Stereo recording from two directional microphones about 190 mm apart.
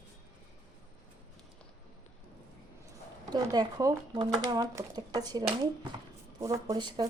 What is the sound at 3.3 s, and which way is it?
Speech, 20° right (ahead or behind).